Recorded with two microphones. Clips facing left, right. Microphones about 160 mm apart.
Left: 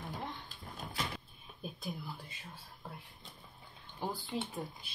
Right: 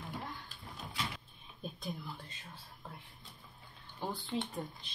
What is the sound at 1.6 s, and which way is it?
Whispering, 5° left (ahead or behind).